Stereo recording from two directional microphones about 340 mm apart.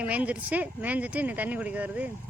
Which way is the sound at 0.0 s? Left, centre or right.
Centre.